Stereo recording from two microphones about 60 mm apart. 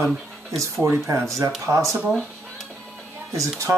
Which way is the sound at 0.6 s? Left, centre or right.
Right.